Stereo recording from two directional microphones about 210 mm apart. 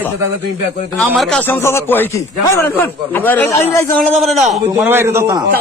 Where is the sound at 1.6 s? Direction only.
10° left (ahead or behind).